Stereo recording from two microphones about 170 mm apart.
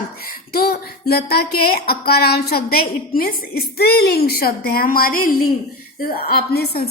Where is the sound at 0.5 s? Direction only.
65° left (ahead or behind).